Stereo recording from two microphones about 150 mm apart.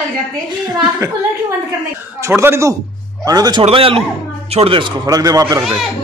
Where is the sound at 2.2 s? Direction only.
20° right (ahead or behind).